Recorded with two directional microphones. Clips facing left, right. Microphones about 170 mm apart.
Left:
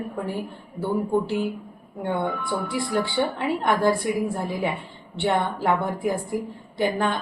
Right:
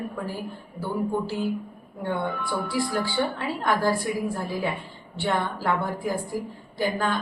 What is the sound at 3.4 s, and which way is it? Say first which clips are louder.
A woman's voice: left 6 dB; 25° left (ahead or behind).